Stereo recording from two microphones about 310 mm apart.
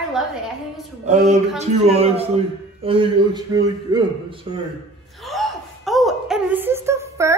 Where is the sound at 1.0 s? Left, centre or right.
Right.